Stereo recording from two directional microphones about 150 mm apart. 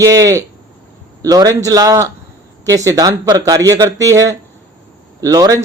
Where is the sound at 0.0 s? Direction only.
20° right (ahead or behind).